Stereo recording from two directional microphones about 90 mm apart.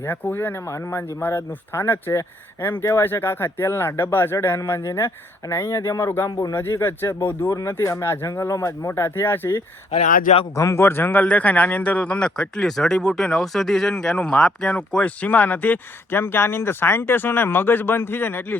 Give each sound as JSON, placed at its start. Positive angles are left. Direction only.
{"t": 0.0, "sound": "speech", "side_deg": 25}
{"t": 10.5, "sound": "speech", "side_deg": 35}